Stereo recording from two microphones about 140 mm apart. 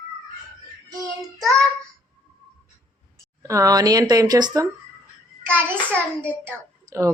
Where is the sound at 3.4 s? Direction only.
25° right (ahead or behind).